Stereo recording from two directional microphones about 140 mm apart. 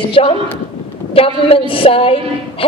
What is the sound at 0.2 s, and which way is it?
A woman's voice, 45° left (ahead or behind).